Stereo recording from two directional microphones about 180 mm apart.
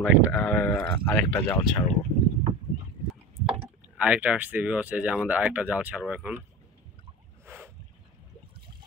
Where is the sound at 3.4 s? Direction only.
5° right (ahead or behind).